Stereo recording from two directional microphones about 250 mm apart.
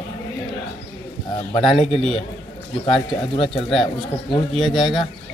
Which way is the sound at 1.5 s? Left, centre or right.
Left.